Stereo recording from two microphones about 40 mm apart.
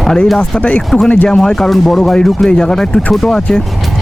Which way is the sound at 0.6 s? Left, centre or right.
Left.